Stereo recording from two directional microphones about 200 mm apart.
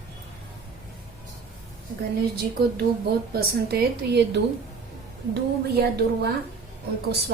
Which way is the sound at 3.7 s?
50° right (ahead or behind).